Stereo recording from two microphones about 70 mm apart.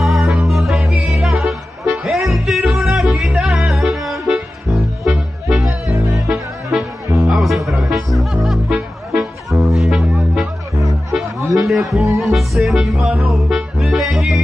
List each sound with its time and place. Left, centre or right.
0.0 s music: centre
5.6 s music: right
6.2 s music: centre
11.5 s music: centre